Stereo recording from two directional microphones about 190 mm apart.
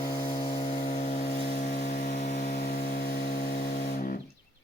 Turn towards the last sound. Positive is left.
turn(degrees=50)  # may be behind; listen again after turning